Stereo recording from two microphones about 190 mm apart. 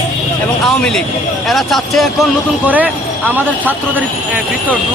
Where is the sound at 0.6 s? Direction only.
Centre (ahead or behind).